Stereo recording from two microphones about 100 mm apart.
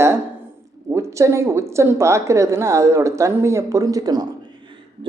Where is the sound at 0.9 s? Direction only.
30° right (ahead or behind).